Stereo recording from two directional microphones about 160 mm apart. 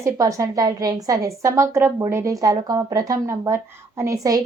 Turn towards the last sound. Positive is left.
turn(degrees=-20)  # may be behind; listen again after turning